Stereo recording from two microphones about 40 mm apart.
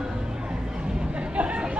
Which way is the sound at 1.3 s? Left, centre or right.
Right.